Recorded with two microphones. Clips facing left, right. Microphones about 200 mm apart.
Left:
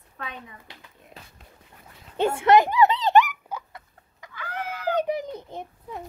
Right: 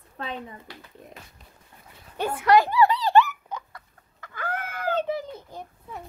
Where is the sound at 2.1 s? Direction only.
25° left (ahead or behind).